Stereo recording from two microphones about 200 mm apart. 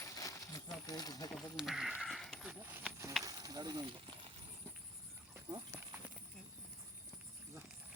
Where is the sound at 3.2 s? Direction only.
20° right (ahead or behind).